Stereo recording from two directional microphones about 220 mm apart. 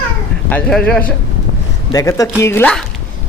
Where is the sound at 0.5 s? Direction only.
5° left (ahead or behind).